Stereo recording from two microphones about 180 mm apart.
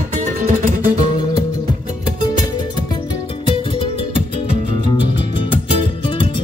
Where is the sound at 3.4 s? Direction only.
30° left (ahead or behind).